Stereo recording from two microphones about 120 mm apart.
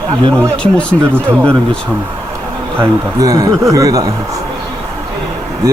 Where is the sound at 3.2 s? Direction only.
30° right (ahead or behind).